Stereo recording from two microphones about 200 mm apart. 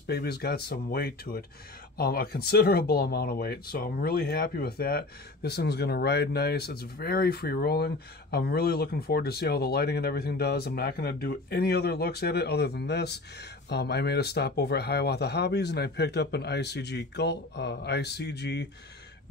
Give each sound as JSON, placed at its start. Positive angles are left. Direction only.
{"t": 0.0, "sound": "speech", "side_deg": 55}